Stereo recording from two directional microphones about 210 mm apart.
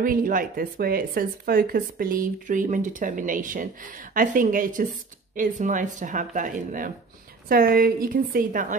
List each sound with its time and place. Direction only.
0.0 s a woman's voice: 40° right (ahead or behind)